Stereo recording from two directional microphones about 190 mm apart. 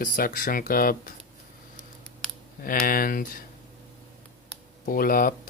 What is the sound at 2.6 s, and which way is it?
Speech, 50° left (ahead or behind).